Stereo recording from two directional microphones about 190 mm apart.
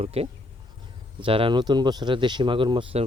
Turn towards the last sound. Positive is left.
turn(degrees=-25)  # may be behind; listen again after turning